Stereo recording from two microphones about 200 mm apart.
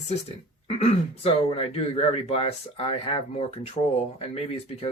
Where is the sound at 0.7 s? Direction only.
30° left (ahead or behind).